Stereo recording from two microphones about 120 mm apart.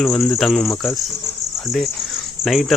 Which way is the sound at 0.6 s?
25° left (ahead or behind).